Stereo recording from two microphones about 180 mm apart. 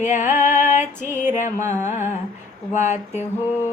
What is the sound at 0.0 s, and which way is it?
Music, 45° left (ahead or behind).